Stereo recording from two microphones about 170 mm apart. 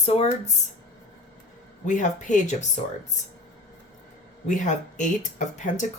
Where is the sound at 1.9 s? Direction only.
45° left (ahead or behind).